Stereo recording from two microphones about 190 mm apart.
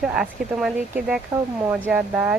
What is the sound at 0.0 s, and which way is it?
Speech, 5° right (ahead or behind).